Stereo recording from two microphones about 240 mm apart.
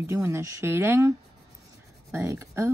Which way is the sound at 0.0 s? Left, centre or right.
Centre.